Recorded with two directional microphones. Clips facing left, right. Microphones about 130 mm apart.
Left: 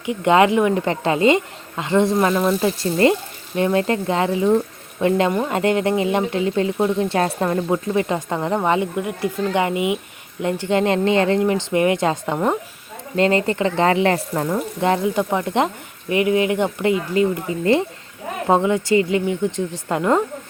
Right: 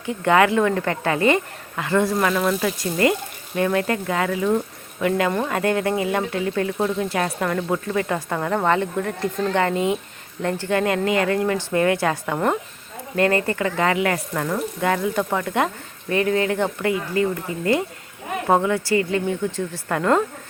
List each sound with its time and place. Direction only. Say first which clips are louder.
0.0 s speech: left 2 dB; 20° left (ahead or behind)